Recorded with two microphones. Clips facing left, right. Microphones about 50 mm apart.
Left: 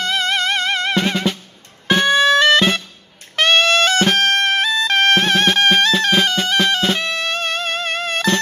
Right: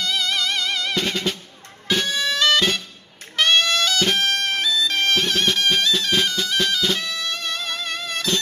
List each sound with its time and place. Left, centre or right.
0.0 s music: left